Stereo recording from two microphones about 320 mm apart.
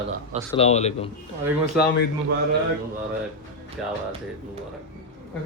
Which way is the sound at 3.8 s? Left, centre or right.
Centre.